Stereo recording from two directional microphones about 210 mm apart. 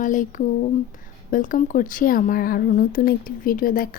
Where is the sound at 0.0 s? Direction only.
40° left (ahead or behind).